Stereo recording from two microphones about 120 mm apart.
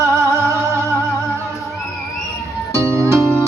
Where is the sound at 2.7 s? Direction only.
20° right (ahead or behind).